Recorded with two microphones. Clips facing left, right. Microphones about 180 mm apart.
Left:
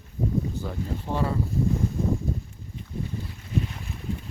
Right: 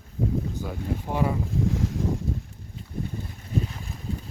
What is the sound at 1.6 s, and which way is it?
Boat, 90° right.